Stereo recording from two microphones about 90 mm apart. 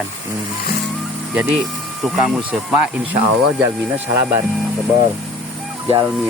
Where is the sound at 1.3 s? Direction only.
15° right (ahead or behind).